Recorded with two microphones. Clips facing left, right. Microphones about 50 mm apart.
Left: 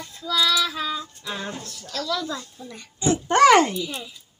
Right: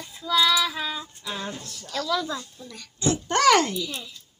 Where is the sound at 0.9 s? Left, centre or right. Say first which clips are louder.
Left 4 dB; right.